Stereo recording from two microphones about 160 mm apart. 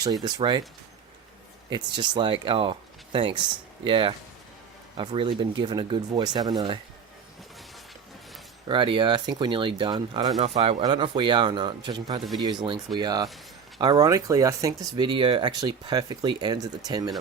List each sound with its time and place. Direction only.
0.0 s speech: 25° right (ahead or behind)
1.7 s speech: 30° right (ahead or behind)
8.6 s speech: 30° right (ahead or behind)
10.4 s speech: 40° right (ahead or behind)